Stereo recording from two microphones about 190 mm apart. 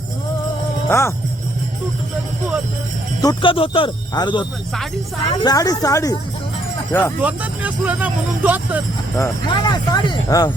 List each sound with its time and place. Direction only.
0.9 s speech: 15° left (ahead or behind)
3.2 s speech: 25° left (ahead or behind)
7.2 s speech: 10° right (ahead or behind)
9.1 s speech: 20° left (ahead or behind)